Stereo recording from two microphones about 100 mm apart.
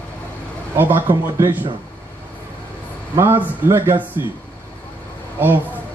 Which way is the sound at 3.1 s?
25° right (ahead or behind).